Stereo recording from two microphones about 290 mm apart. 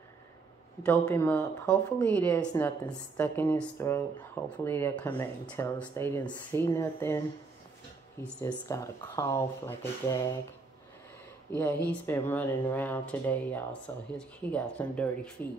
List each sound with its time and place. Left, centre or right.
0.8 s speech: centre
11.5 s speech: centre